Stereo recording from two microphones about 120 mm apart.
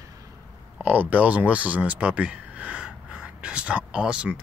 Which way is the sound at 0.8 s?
15° right (ahead or behind).